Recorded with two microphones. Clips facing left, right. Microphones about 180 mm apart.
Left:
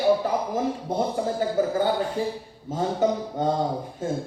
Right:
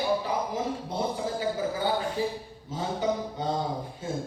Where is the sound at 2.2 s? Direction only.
50° left (ahead or behind).